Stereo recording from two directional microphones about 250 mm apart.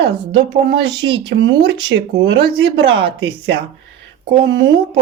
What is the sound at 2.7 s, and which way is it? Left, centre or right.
Speech, right.